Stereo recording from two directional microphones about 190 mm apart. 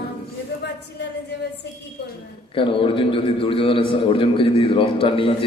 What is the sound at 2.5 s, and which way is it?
A man's voice, 25° left (ahead or behind).